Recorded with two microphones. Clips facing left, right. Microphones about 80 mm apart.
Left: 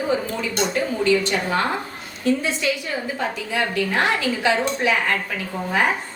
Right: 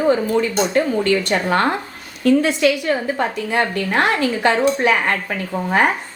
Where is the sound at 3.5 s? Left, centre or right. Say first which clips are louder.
Right 3 dB; right.